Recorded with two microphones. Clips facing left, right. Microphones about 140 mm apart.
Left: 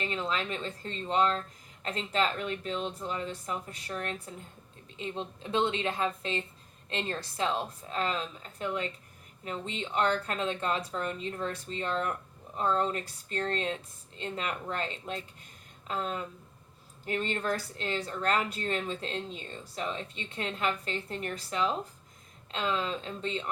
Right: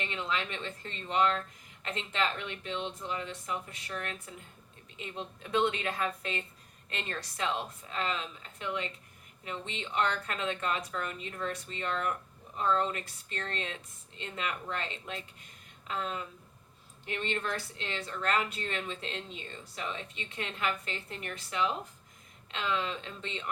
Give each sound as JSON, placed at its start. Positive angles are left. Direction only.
{"t": 0.0, "sound": "a woman's voice", "side_deg": 35}